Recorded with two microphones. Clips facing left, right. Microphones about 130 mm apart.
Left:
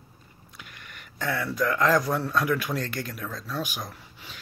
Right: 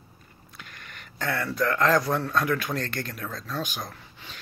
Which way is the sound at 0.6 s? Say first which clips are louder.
Right 1 dB; 10° left (ahead or behind).